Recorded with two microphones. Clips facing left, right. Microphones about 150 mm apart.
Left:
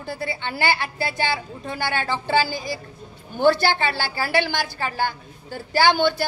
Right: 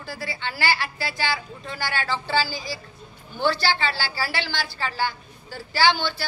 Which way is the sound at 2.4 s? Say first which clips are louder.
Left 4 dB; 55° left (ahead or behind).